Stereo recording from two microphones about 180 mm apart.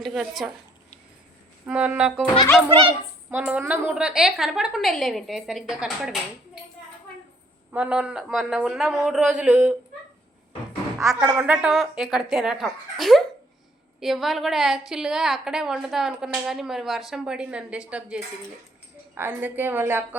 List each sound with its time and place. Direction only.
0.0 s a woman's voice: centre (ahead or behind)
1.6 s a woman's voice: 5° right (ahead or behind)
2.6 s speech: 30° right (ahead or behind)
3.2 s a woman's voice: 5° right (ahead or behind)
7.7 s a woman's voice: 5° right (ahead or behind)
11.2 s a woman's voice: 10° right (ahead or behind)